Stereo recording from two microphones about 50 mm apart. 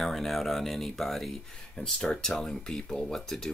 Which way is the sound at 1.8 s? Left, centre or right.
Centre.